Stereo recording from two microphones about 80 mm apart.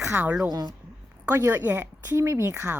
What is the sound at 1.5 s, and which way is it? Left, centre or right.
Speech, right.